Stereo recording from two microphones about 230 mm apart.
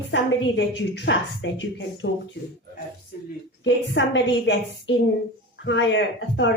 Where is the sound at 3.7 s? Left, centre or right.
Left.